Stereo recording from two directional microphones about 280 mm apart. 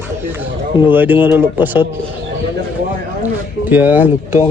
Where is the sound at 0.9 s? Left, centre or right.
Centre.